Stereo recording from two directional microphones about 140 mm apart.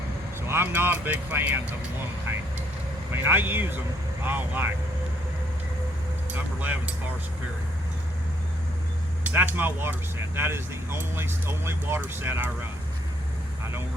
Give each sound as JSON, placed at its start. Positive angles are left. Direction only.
{"t": 0.4, "sound": "speech", "side_deg": -15}
{"t": 3.1, "sound": "speech", "side_deg": -15}
{"t": 6.3, "sound": "speech", "side_deg": -10}
{"t": 9.2, "sound": "speech", "side_deg": -15}